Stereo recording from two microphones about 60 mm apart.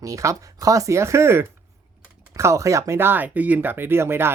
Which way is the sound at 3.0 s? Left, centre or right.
Right.